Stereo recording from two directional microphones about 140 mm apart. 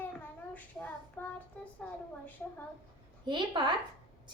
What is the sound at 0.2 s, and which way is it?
Child singing, 10° left (ahead or behind).